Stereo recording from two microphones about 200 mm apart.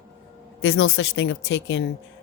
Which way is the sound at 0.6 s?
85° left.